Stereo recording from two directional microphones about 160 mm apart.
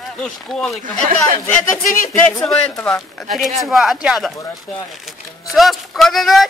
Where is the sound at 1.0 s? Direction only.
45° right (ahead or behind).